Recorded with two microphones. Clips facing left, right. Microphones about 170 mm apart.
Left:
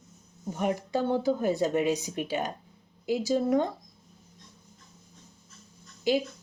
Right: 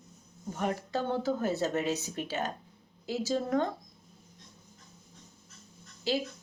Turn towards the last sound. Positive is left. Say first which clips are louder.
# left 5 dB
turn(degrees=15)  # may be behind; listen again after turning